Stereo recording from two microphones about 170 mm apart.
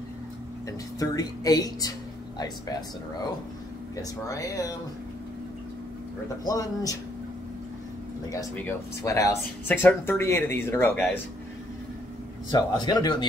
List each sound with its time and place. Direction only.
0.7 s speech: 20° left (ahead or behind)
3.9 s speech: 20° left (ahead or behind)
6.4 s speech: 20° left (ahead or behind)
8.3 s speech: 15° left (ahead or behind)
12.4 s speech: 25° left (ahead or behind)